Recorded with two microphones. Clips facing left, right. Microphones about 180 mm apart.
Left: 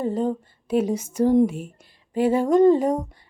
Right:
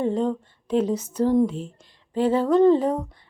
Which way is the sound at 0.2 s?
10° left (ahead or behind).